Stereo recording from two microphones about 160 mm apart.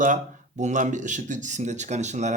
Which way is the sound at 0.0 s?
50° right (ahead or behind).